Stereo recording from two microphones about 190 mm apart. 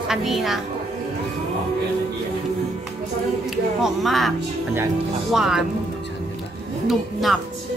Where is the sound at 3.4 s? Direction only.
Centre (ahead or behind).